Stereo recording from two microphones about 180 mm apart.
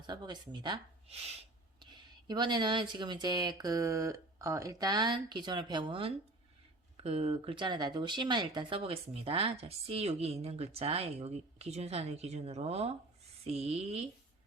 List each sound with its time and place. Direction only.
0.1 s speech: 25° right (ahead or behind)